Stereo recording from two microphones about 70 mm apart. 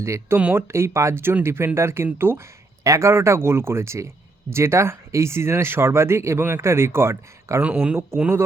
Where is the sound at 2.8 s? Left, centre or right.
Right.